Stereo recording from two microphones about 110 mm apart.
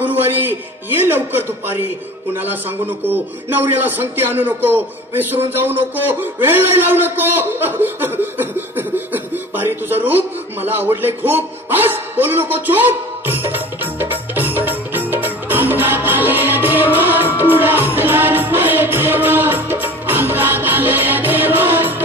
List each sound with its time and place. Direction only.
0.0 s a man's voice: 15° right (ahead or behind)
17.4 s music: 15° right (ahead or behind)